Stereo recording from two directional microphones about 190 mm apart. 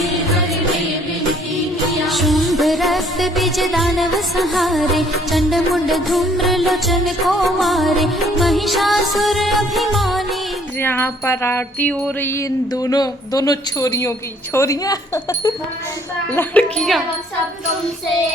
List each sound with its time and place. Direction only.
0.0 s music: centre (ahead or behind)
2.0 s music: centre (ahead or behind)
10.8 s music: 10° left (ahead or behind)
16.3 s speech: 10° left (ahead or behind)